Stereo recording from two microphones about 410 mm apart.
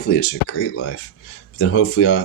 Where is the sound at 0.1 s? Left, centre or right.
Left.